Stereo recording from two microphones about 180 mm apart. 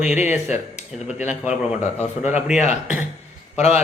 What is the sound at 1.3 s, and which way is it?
Speech, 5° right (ahead or behind).